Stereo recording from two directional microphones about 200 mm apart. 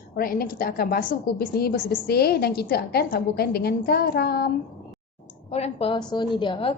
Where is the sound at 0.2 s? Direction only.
50° left (ahead or behind).